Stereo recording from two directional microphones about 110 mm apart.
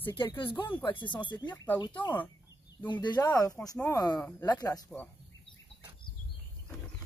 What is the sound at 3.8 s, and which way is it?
Speech, 35° left (ahead or behind).